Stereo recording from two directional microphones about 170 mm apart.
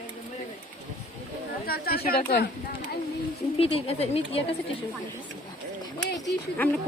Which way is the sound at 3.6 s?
35° left (ahead or behind).